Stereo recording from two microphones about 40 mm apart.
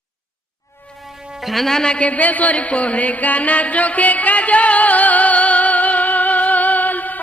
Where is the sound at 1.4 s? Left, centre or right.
Centre.